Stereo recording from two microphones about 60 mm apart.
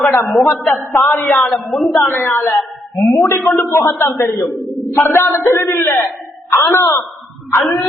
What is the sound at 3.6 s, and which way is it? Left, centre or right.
Speech, left.